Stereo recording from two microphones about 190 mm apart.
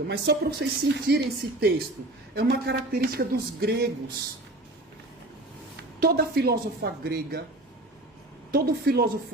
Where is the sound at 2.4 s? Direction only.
55° right (ahead or behind).